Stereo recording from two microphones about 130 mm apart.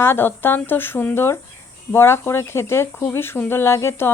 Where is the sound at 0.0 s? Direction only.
15° left (ahead or behind).